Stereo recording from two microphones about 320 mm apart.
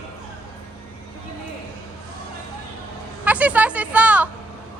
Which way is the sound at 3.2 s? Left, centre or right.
Centre.